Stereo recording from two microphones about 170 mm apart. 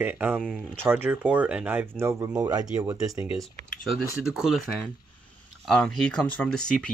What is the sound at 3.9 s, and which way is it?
Speech, centre (ahead or behind).